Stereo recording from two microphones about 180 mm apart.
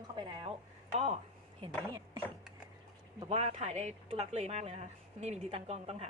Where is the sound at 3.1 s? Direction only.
35° right (ahead or behind).